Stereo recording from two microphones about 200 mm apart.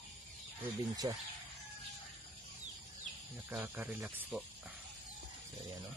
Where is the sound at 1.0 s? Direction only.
20° right (ahead or behind).